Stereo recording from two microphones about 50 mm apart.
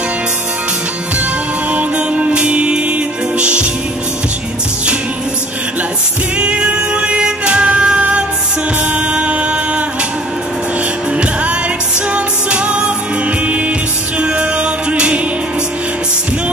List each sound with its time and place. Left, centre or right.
1.7 s music: right
6.3 s music: right
12.1 s music: right
14.2 s music: right